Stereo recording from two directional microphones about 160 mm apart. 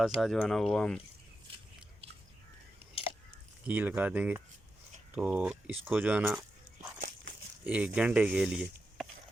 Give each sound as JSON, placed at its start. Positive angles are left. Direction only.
{"t": 0.2, "sound": "speech", "side_deg": 0}
{"t": 2.9, "sound": "a sound", "side_deg": 35}
{"t": 3.7, "sound": "speech", "side_deg": -10}
{"t": 7.6, "sound": "speech", "side_deg": -10}